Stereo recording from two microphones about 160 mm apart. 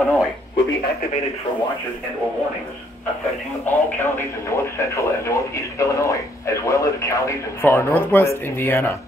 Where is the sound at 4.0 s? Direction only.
15° left (ahead or behind).